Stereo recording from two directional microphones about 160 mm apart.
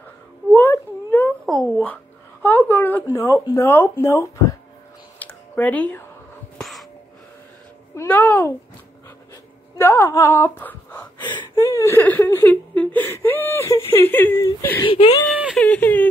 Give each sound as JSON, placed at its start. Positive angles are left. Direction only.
{"t": 0.5, "sound": "a sound", "side_deg": 10}
{"t": 2.4, "sound": "speech", "side_deg": 10}
{"t": 5.2, "sound": "a sound", "side_deg": 10}
{"t": 7.9, "sound": "a child's voice", "side_deg": 15}
{"t": 9.8, "sound": "a sound", "side_deg": 15}
{"t": 11.2, "sound": "whimper", "side_deg": 25}
{"t": 13.9, "sound": "speech", "side_deg": 10}
{"t": 14.9, "sound": "speech", "side_deg": 40}
{"t": 15.5, "sound": "speech", "side_deg": 10}